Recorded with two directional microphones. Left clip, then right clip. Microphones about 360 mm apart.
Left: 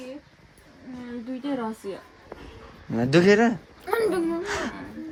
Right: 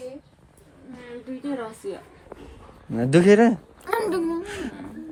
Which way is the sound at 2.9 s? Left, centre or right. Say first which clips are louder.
Right 2 dB; centre.